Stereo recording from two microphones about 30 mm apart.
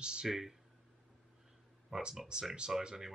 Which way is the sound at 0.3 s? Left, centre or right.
Centre.